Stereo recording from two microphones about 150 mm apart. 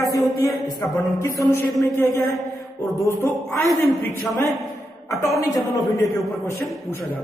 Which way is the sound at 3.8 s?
15° left (ahead or behind).